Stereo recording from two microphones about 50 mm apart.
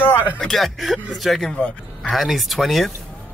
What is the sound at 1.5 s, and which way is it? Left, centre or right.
Speech, left.